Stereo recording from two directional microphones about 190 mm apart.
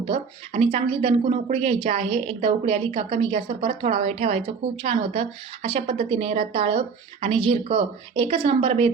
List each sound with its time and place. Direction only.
0.1 s speech: 30° right (ahead or behind)